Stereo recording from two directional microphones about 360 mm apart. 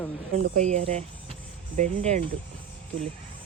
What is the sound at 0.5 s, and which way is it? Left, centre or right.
Speech, centre.